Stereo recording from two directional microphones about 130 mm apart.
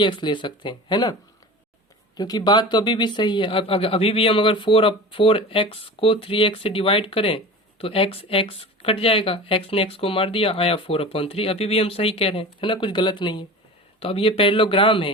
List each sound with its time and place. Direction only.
0.0 s speech: 35° left (ahead or behind)
2.1 s speech: 30° left (ahead or behind)